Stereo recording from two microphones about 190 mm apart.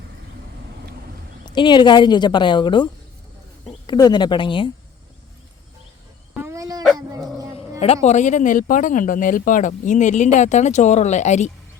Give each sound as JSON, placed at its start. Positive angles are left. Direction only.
{"t": 1.5, "sound": "speech", "side_deg": 25}
{"t": 6.3, "sound": "dog", "side_deg": -15}
{"t": 8.0, "sound": "speech", "side_deg": 40}